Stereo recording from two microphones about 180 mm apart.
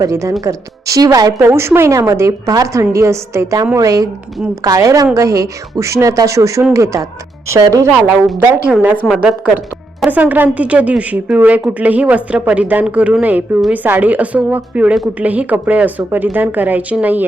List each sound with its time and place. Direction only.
0.0 s a woman's voice: 15° right (ahead or behind)
10.0 s a woman's voice: 10° right (ahead or behind)